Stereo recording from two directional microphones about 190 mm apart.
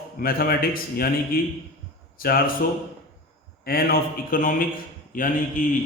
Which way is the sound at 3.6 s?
50° left (ahead or behind).